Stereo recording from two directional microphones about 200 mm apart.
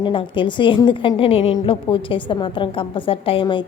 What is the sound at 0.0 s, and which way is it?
A woman's voice, 25° left (ahead or behind).